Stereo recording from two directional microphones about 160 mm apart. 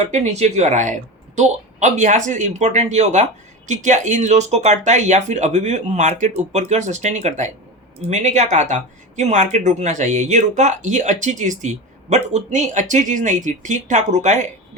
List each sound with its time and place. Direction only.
0.0 s speech: 45° right (ahead or behind)